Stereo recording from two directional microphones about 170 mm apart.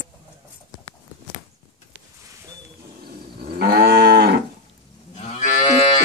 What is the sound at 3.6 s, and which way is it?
Moo, 65° right (ahead or behind).